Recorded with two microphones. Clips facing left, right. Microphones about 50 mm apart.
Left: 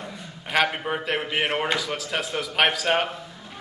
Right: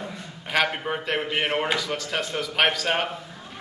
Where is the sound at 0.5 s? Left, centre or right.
Centre.